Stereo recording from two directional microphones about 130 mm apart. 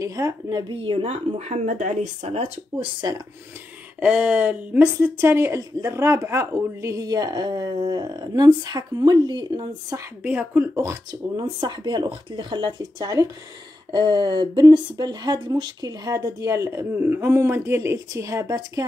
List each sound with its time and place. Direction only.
0.0 s a woman's voice: 25° right (ahead or behind); by 2.9 s 55° right (ahead or behind)
4.0 s speech: 10° right (ahead or behind); by 10.0 s 30° right (ahead or behind)
10.2 s speech: 10° right (ahead or behind)
11.1 s speech: 35° right (ahead or behind)